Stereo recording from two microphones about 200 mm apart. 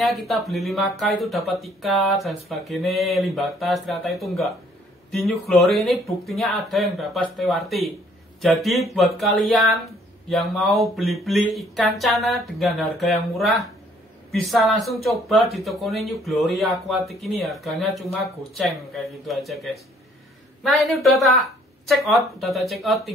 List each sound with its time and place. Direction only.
0.0 s speech: centre (ahead or behind)